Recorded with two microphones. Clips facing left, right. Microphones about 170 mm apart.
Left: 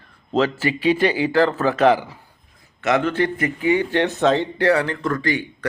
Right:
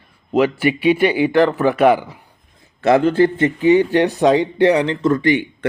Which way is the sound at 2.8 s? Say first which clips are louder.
Right 6 dB; 30° right (ahead or behind).